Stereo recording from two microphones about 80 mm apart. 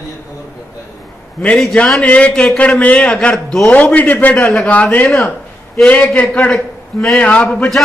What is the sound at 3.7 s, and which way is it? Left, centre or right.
A man's voice, centre.